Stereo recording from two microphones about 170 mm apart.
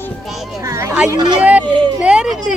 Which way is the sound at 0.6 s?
20° right (ahead or behind).